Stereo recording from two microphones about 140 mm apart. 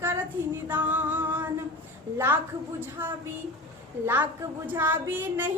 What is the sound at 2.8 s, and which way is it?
Speech, 15° right (ahead or behind).